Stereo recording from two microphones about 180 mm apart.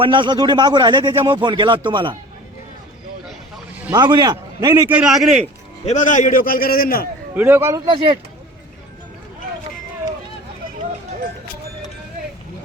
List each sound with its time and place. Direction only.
0.0 s a man's voice: 25° right (ahead or behind)
3.2 s vehicle: 5° right (ahead or behind)
3.9 s a man's voice: 25° right (ahead or behind)
4.9 s a man's voice: 5° right (ahead or behind)
5.8 s a man's voice: 40° left (ahead or behind)
7.3 s a man's voice: 10° right (ahead or behind)
7.9 s a man's voice: 30° right (ahead or behind)